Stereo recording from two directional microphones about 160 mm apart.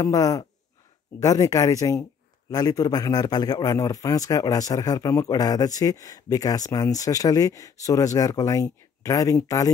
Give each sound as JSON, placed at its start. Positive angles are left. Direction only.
{"t": 0.0, "sound": "a man's voice", "side_deg": 20}